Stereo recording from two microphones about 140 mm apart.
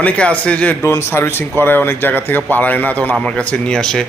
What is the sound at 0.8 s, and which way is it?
A man's voice, 20° left (ahead or behind).